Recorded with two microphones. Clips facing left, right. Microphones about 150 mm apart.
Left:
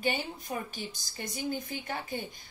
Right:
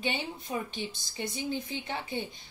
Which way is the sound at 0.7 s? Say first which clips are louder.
Right 3 dB; 25° right (ahead or behind).